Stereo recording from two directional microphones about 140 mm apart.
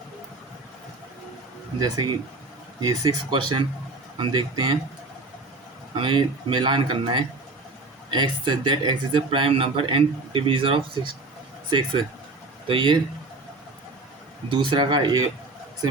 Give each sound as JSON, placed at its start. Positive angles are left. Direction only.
{"t": 1.8, "sound": "speech", "side_deg": -30}
{"t": 5.9, "sound": "speech", "side_deg": -35}
{"t": 12.6, "sound": "speech", "side_deg": -40}
{"t": 14.5, "sound": "speech", "side_deg": -35}